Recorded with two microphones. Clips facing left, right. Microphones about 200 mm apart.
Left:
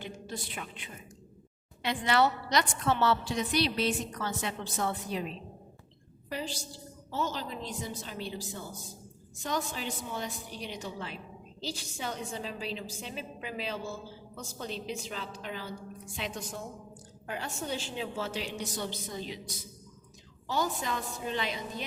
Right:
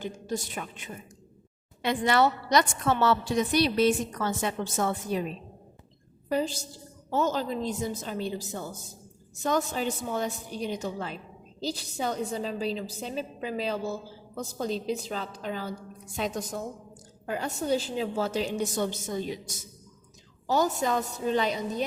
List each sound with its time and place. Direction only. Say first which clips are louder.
0.0 s a woman's voice: right 7 dB; 45° right (ahead or behind)
2.8 s a woman's voice: right 3 dB; 50° right (ahead or behind)